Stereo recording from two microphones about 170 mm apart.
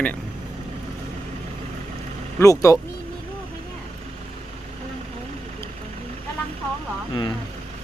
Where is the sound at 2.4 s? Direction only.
20° left (ahead or behind).